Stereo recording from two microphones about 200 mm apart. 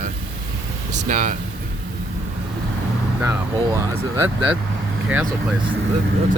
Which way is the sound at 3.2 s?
15° right (ahead or behind).